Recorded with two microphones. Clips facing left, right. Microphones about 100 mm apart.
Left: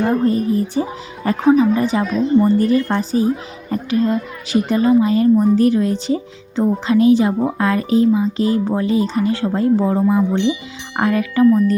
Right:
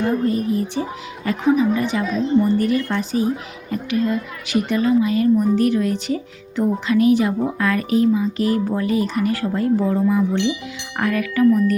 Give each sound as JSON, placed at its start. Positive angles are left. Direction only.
{"t": 0.0, "sound": "a woman's voice", "side_deg": 35}